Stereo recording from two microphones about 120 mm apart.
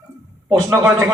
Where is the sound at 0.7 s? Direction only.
20° right (ahead or behind).